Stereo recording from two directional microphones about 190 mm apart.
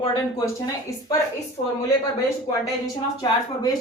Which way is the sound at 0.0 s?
20° left (ahead or behind).